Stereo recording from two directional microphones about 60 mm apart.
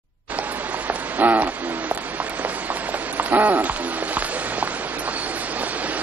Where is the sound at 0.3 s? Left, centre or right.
Right.